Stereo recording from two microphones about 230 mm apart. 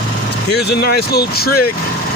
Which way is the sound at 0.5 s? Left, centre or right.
Left.